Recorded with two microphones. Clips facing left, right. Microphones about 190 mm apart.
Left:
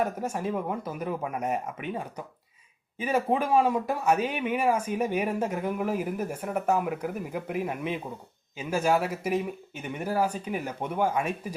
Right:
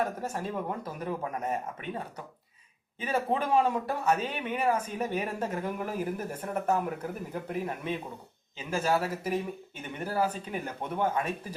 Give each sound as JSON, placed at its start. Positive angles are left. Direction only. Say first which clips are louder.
{"t": 0.2, "sound": "speech", "louder": "left 4 dB", "side_deg": 10}
{"t": 3.0, "sound": "speech", "louder": "left 3 dB", "side_deg": 10}